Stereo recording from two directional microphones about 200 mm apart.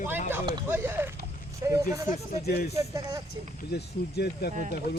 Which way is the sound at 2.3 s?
45° left (ahead or behind).